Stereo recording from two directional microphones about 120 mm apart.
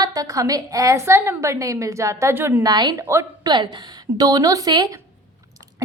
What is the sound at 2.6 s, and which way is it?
Speech, 35° right (ahead or behind).